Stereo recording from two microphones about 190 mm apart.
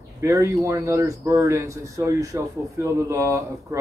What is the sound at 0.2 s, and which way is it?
Speech, 15° right (ahead or behind).